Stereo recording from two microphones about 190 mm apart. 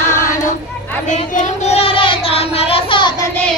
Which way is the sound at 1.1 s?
35° left (ahead or behind).